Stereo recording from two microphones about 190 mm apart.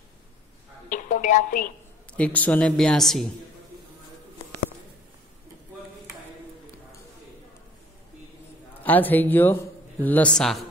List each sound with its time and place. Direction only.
0.8 s music: 40° left (ahead or behind)
2.1 s speech: 5° left (ahead or behind)
8.8 s a man's voice: 10° left (ahead or behind)